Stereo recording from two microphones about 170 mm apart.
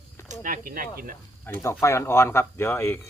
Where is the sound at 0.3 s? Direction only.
50° right (ahead or behind).